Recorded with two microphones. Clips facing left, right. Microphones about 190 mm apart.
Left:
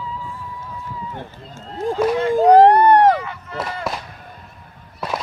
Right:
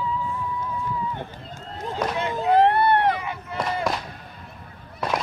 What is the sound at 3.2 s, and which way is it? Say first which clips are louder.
Chop: even; 15° right (ahead or behind).